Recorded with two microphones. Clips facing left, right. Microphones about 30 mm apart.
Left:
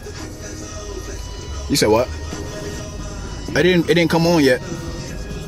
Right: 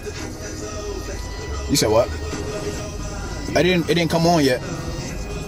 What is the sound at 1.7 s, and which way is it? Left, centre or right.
Speech, centre.